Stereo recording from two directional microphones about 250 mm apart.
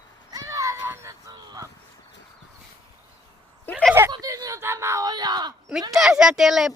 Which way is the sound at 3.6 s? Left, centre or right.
Centre.